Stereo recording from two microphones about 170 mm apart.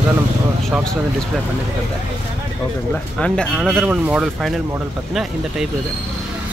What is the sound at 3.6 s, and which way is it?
Speech, 5° right (ahead or behind).